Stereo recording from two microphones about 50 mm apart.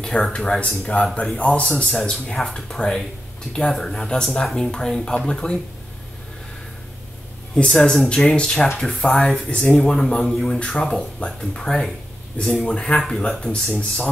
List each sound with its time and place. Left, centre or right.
0.0 s speech: centre
7.5 s speech: centre
13.0 s speech: centre